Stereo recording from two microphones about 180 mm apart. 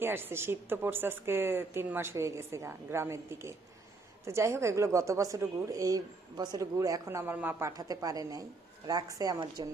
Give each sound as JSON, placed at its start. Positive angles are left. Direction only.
{"t": 0.0, "sound": "a woman's voice", "side_deg": -10}